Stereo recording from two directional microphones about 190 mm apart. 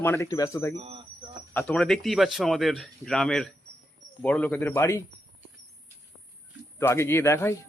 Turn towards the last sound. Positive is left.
turn(degrees=15)  # may be behind; listen again after turning